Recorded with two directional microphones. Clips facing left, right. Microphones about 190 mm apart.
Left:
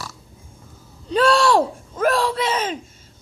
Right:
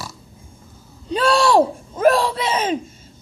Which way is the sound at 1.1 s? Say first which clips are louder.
Even; 15° right (ahead or behind).